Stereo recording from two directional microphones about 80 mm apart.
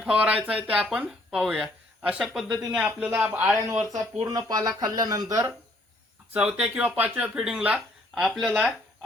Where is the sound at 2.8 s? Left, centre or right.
Right.